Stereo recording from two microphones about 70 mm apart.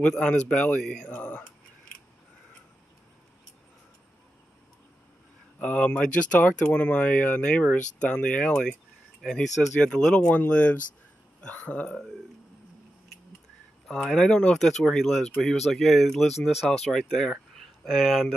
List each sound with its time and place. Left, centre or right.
0.0 s speech: centre
5.6 s speech: centre
13.8 s speech: centre